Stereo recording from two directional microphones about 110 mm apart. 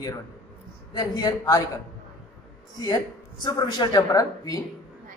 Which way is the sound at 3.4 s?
40° left (ahead or behind).